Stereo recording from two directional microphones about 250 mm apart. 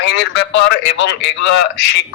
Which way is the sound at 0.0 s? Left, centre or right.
Left.